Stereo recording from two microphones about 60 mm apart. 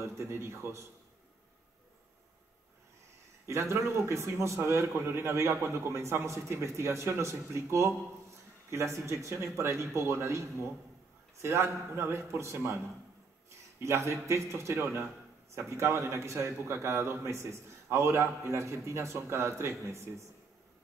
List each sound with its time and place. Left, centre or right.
0.0 s a man's voice: right
3.4 s a man's voice: right
11.4 s a man's voice: right